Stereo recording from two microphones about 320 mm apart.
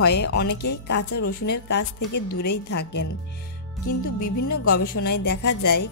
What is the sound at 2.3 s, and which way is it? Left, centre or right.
Music, left.